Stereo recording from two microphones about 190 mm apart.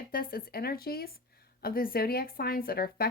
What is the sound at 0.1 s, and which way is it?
Speech, 50° left (ahead or behind).